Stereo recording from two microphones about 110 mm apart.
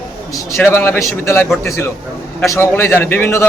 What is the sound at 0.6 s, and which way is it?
A man's voice, 20° left (ahead or behind).